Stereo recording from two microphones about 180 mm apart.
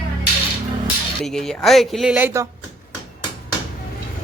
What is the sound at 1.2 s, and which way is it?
Speech, 5° left (ahead or behind).